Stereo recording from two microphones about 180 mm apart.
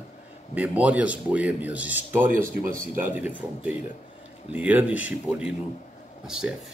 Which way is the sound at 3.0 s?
10° right (ahead or behind).